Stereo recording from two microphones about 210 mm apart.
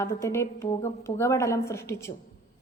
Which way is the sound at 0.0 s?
15° left (ahead or behind).